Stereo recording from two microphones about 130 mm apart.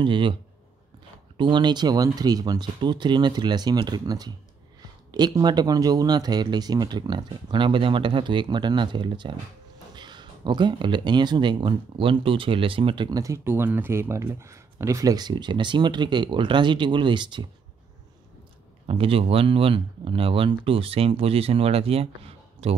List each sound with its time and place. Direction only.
0.0 s speech: 40° right (ahead or behind)
13.2 s speech: 20° right (ahead or behind); by 17.5 s 35° right (ahead or behind)
18.9 s speech: 45° right (ahead or behind)